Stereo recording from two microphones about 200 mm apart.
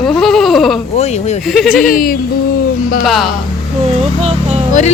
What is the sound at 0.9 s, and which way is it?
Speech, 35° left (ahead or behind).